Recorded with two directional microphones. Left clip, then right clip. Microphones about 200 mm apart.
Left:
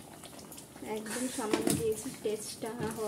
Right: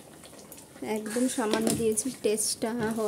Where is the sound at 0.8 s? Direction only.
55° right (ahead or behind).